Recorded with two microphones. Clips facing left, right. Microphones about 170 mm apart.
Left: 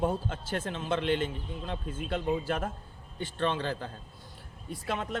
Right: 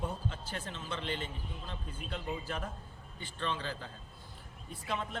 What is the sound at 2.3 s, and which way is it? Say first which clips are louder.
Speech: left 8 dB; 75° left (ahead or behind).